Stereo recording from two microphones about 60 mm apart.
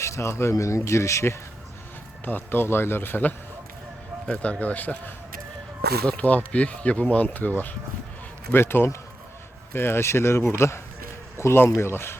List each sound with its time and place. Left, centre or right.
0.0 s speech: left
2.2 s speech: left
4.3 s speech: centre
8.5 s speech: left